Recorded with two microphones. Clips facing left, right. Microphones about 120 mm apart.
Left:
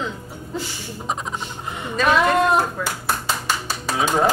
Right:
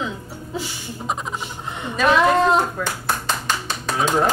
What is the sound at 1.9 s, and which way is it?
Speech, centre (ahead or behind).